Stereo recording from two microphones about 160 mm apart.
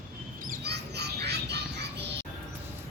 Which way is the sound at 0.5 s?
90° right.